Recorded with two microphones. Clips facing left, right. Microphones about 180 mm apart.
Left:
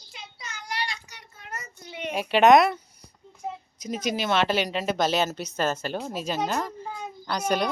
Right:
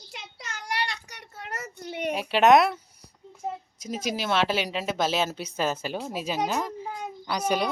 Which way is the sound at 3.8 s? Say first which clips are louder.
Left 2 dB; 5° right (ahead or behind).